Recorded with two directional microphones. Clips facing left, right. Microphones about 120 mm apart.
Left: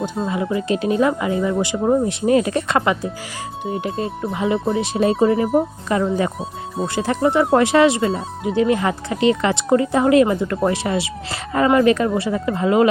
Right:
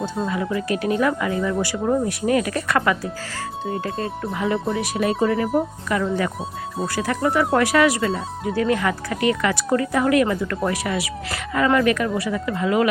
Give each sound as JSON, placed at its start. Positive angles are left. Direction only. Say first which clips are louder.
{"t": 0.2, "sound": "speech", "louder": "left 2 dB", "side_deg": 15}